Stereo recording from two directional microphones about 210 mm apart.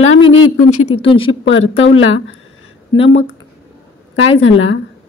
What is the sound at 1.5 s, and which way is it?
Speech, 70° left (ahead or behind).